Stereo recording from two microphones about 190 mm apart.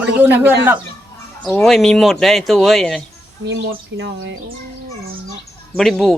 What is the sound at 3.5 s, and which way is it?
Speech, 65° right (ahead or behind).